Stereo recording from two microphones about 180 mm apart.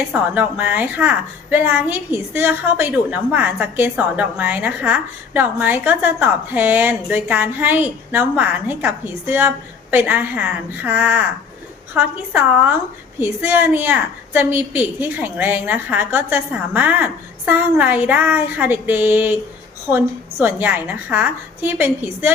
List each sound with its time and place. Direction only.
0.1 s a woman's voice: 10° right (ahead or behind)
20.4 s a woman's voice: 10° right (ahead or behind)